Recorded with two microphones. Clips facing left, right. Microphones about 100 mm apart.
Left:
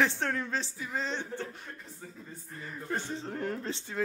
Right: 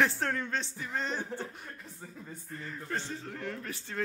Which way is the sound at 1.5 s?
5° right (ahead or behind).